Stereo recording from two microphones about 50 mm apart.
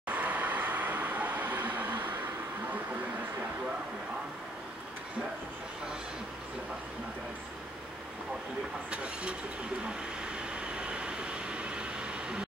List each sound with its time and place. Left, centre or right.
0.1 s vehicle: right
8.9 s vehicle: right